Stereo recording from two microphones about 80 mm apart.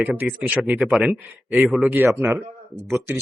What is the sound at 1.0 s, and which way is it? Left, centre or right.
Speech, centre.